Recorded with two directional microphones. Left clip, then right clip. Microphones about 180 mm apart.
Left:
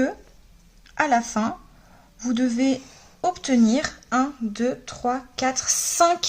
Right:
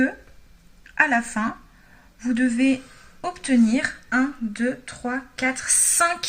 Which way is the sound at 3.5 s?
60° left (ahead or behind).